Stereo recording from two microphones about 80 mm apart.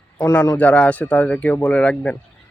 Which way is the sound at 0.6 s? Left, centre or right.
Centre.